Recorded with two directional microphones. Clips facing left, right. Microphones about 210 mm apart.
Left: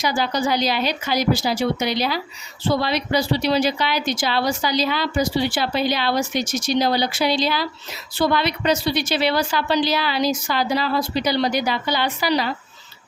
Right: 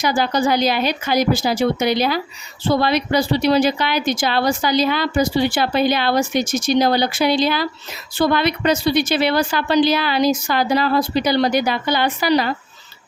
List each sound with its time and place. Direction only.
0.0 s speech: 50° right (ahead or behind)